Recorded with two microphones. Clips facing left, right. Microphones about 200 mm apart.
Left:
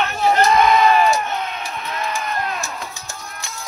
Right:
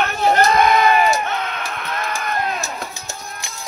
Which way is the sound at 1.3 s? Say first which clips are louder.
Right 1 dB; 70° right (ahead or behind).